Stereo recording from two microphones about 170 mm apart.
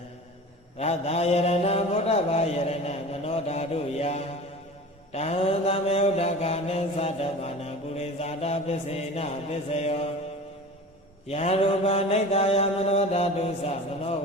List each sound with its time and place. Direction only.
0.8 s mantra: 40° left (ahead or behind)
11.3 s mantra: 40° left (ahead or behind)